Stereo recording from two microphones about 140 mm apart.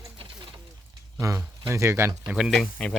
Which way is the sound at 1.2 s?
20° right (ahead or behind).